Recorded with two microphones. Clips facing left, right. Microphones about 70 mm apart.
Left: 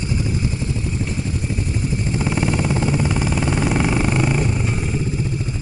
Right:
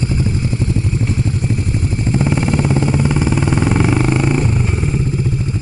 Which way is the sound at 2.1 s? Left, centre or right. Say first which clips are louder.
Right 6 dB; centre.